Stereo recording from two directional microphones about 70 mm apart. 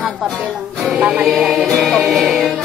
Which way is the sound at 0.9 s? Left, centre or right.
Centre.